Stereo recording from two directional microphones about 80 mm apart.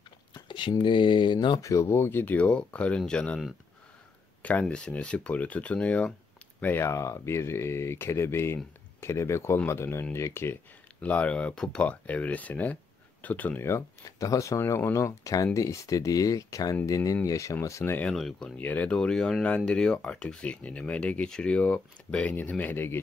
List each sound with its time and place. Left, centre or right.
0.3 s speech: left
1.6 s speech: left; by 3.3 s centre
4.4 s speech: centre
6.6 s speech: left
6.9 s speech: left
11.0 s speech: centre
13.7 s speech: left
18.1 s speech: centre
18.6 s speech: left
18.9 s speech: centre; by 22.9 s left